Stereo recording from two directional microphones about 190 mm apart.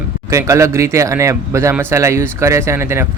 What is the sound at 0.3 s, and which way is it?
Speech, 15° right (ahead or behind).